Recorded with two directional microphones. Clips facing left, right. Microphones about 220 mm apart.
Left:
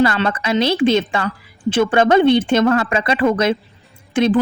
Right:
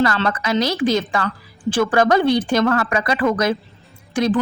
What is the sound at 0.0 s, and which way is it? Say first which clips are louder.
Speech: left 2 dB; 25° left (ahead or behind).